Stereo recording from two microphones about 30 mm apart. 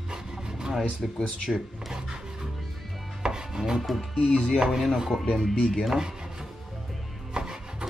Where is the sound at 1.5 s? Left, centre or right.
Centre.